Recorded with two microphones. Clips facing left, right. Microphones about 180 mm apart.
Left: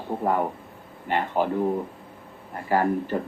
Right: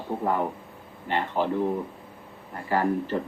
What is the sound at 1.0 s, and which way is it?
Speech, 15° left (ahead or behind).